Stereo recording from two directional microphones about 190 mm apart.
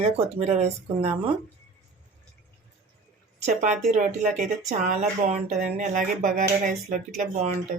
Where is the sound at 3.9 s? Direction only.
40° right (ahead or behind).